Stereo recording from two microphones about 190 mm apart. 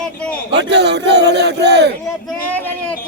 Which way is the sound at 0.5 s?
65° right (ahead or behind).